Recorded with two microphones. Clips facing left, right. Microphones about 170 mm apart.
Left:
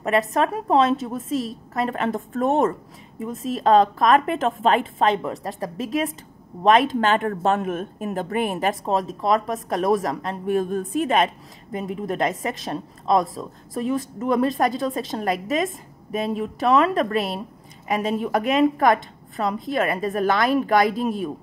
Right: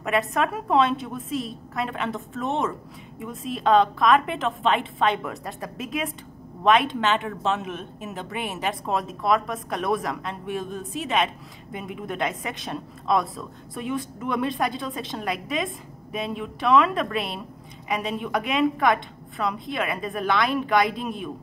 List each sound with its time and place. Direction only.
0.3 s a woman's voice: 35° left (ahead or behind)